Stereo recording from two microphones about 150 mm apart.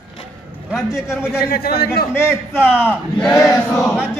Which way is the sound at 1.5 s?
90° left.